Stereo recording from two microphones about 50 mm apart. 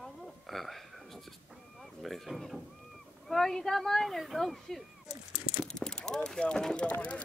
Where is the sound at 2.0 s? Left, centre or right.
Centre.